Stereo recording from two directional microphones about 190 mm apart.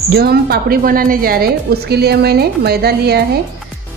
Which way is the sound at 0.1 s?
55° right (ahead or behind).